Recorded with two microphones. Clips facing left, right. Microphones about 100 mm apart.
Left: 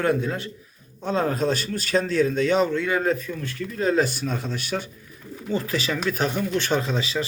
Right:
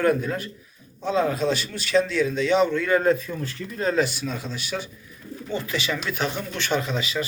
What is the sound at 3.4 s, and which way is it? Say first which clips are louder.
Speech: left 1 dB; 25° right (ahead or behind).